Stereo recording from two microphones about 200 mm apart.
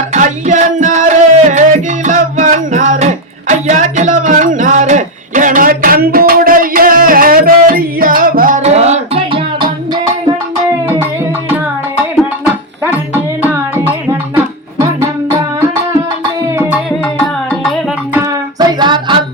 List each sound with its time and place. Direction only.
0.1 s music: 35° right (ahead or behind)
12.8 s music: 10° right (ahead or behind)
17.2 s music: centre (ahead or behind)
18.6 s a sound: 20° right (ahead or behind)